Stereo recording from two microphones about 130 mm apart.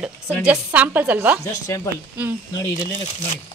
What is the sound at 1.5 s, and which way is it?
Speech, 25° left (ahead or behind).